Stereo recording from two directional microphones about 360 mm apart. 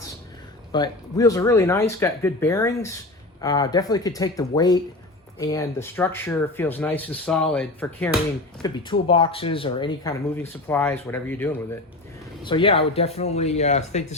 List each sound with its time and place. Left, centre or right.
0.7 s speech: centre